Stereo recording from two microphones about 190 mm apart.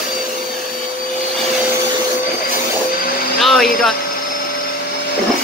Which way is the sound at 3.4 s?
Centre (ahead or behind).